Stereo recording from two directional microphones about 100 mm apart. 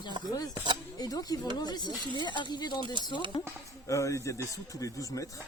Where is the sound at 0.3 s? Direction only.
40° left (ahead or behind).